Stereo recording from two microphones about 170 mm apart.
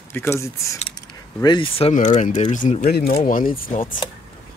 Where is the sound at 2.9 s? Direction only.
65° left (ahead or behind).